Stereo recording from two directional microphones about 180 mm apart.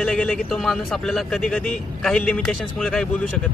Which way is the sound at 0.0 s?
5° left (ahead or behind).